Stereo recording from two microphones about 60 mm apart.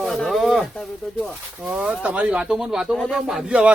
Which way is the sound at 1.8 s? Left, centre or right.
Centre.